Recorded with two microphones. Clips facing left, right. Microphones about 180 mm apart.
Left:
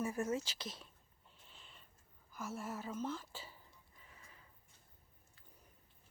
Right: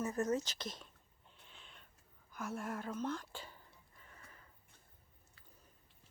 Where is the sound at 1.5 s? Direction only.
Centre (ahead or behind).